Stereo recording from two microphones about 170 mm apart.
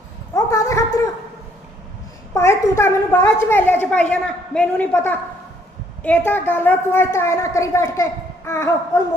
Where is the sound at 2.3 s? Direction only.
15° left (ahead or behind).